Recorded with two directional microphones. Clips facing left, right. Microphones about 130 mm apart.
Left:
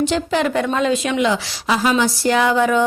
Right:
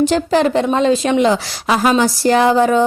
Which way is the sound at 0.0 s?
40° right (ahead or behind).